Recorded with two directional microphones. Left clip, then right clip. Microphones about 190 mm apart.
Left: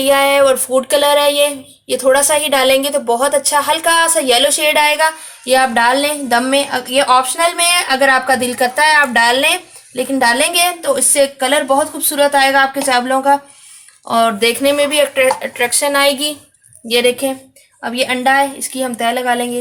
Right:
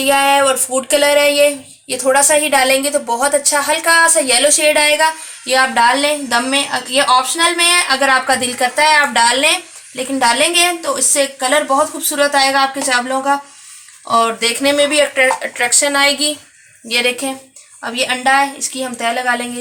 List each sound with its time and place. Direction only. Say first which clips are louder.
0.0 s a woman's voice: left 1 dB; 50° left (ahead or behind); by 19.5 s 35° left (ahead or behind)